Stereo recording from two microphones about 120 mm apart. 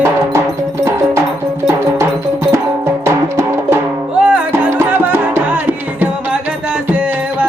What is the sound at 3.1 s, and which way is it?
Music, 20° right (ahead or behind).